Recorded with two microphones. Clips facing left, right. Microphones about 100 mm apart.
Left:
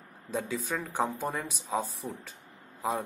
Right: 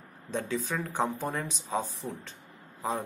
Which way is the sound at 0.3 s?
10° left (ahead or behind).